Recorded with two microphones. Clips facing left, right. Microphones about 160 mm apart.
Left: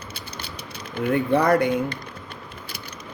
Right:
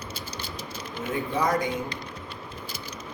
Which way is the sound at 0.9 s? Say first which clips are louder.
Left 9 dB; 60° left (ahead or behind).